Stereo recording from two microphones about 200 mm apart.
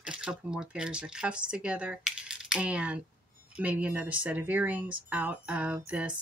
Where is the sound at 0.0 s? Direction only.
5° right (ahead or behind).